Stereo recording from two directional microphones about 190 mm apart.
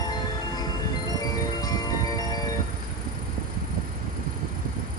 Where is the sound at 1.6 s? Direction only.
20° left (ahead or behind).